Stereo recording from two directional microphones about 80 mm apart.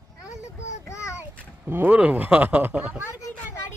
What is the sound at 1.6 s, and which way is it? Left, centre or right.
Speech, right.